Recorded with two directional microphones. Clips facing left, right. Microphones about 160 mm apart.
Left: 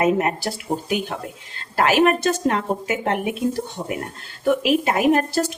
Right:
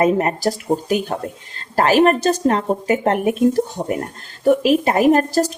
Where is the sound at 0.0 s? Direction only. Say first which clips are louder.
Right 3 dB; 35° right (ahead or behind).